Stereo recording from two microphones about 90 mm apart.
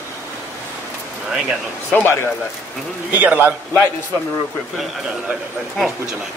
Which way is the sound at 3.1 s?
20° right (ahead or behind).